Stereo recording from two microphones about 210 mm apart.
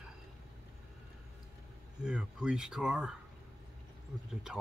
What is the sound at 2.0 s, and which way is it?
Speech, 5° right (ahead or behind).